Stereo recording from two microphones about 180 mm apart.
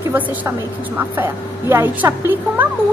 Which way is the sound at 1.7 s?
10° right (ahead or behind).